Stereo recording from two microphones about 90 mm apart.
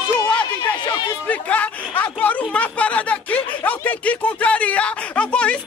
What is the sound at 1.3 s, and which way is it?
Speech, 15° left (ahead or behind).